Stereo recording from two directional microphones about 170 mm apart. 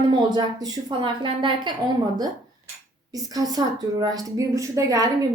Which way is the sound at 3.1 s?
20° right (ahead or behind).